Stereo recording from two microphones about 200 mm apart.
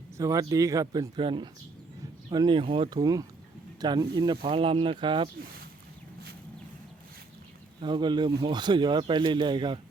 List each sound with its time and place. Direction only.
0.2 s speech: 15° right (ahead or behind)
7.8 s speech: 25° right (ahead or behind)